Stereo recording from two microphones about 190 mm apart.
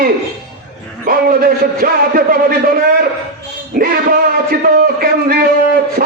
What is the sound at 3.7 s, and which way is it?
A man's voice, 50° right (ahead or behind).